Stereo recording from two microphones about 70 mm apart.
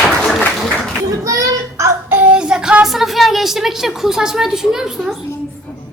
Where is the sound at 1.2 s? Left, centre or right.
Right.